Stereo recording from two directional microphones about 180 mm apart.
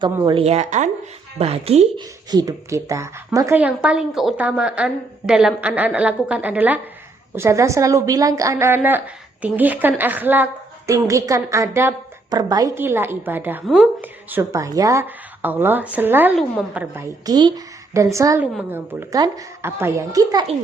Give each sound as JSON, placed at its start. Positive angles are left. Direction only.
{"t": 0.0, "sound": "a woman's voice", "side_deg": -30}
{"t": 2.3, "sound": "a woman's voice", "side_deg": -20}